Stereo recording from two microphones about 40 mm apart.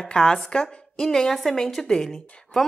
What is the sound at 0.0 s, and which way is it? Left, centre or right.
A woman's voice, left.